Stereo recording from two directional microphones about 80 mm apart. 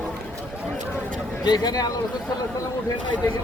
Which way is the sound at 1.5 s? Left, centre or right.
Left.